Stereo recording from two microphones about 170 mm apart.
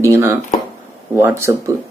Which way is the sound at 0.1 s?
15° right (ahead or behind).